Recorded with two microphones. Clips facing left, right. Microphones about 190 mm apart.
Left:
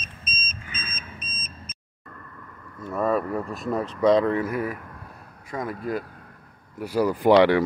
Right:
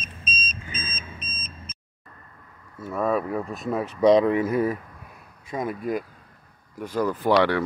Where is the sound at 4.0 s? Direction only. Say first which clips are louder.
Right 2 dB; 15° right (ahead or behind).